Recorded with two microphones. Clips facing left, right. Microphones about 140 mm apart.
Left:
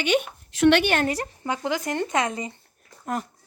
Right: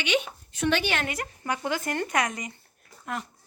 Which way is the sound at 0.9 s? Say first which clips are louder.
Left 6 dB; 40° left (ahead or behind).